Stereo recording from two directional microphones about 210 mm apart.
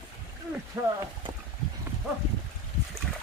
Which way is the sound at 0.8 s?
15° right (ahead or behind).